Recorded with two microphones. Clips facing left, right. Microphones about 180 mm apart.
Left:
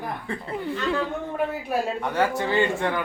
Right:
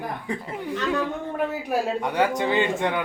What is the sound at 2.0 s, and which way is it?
Speech, 15° right (ahead or behind).